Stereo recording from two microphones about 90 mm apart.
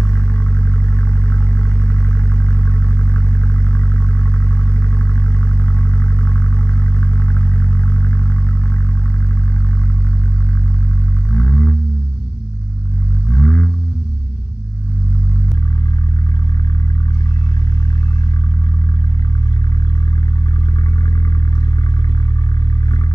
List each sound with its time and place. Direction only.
3.7 s vehicle: 30° left (ahead or behind)
5.8 s vehicle: 25° left (ahead or behind)
11.3 s a sound: 25° left (ahead or behind)
13.4 s vehicle: 20° left (ahead or behind)